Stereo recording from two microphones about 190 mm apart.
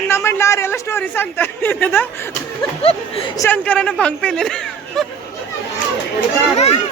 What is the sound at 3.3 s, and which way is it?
Speech, 10° left (ahead or behind).